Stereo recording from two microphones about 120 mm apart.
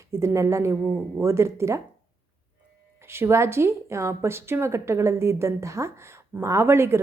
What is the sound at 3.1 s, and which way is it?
A woman's voice, 20° right (ahead or behind).